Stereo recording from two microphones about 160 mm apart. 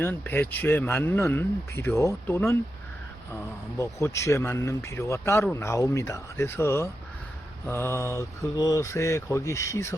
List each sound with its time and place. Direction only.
0.0 s speech: 10° left (ahead or behind)
3.8 s speech: 20° left (ahead or behind)